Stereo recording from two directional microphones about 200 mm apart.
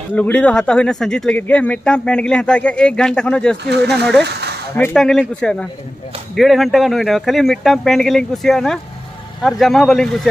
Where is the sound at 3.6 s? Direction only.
55° right (ahead or behind).